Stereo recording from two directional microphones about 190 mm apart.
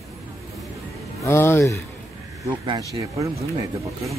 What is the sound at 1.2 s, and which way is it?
Speech, 15° left (ahead or behind).